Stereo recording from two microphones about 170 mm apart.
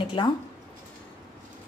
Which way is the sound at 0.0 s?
30° left (ahead or behind).